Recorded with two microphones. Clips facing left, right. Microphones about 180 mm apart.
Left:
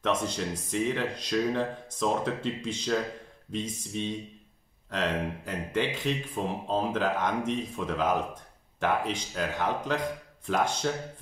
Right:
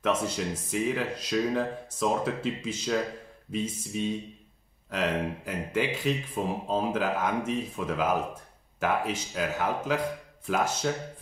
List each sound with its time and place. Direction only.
0.0 s speech: 10° right (ahead or behind)